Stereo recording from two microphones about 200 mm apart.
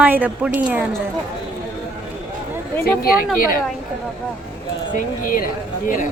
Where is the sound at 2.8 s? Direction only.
50° left (ahead or behind).